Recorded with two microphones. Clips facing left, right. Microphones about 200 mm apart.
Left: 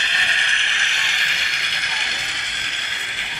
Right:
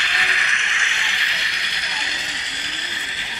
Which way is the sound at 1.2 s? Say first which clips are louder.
Even; 50° left (ahead or behind).